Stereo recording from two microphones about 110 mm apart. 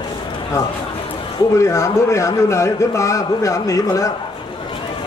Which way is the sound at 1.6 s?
25° left (ahead or behind).